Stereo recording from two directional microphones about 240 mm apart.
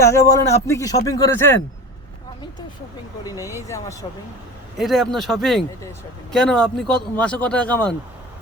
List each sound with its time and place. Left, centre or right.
0.0 s speech: centre
3.2 s speech: centre
4.8 s speech: centre